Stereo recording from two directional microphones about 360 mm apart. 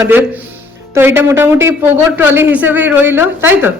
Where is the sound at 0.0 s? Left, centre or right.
Centre.